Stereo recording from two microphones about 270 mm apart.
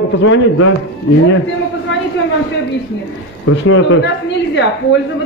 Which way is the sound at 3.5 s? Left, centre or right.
Left.